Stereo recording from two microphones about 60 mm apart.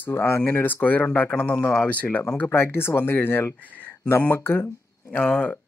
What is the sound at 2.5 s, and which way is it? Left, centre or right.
Speech, left.